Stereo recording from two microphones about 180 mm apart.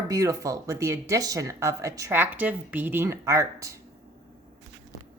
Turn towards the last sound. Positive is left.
turn(degrees=-15)  # may be behind; listen again after turning